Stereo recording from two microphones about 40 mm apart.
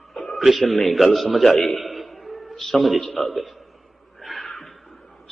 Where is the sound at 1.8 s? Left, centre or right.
Centre.